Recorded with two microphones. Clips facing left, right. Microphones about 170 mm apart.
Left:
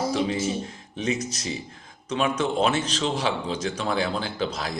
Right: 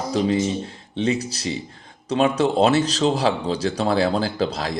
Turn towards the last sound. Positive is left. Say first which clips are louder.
# right 5 dB
turn(degrees=-35)  # may be behind; listen again after turning